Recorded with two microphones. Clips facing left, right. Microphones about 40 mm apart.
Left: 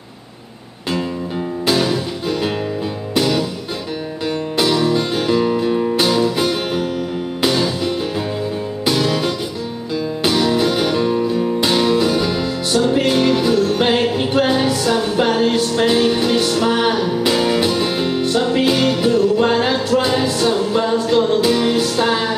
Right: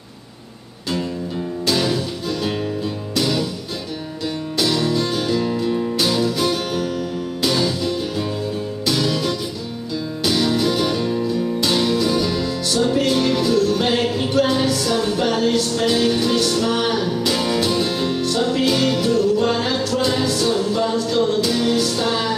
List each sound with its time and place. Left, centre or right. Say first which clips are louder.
1.7 s music: left 3 dB; left
4.6 s music: left 3 dB; centre